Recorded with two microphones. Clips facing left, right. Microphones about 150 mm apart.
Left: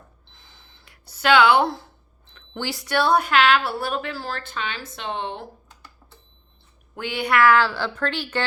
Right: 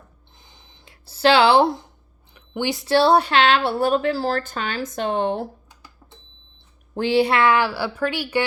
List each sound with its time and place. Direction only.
0.3 s a sound: 20° right (ahead or behind)
1.0 s speech: 30° right (ahead or behind)
6.9 s a woman's voice: 30° right (ahead or behind); by 8.4 s 10° right (ahead or behind)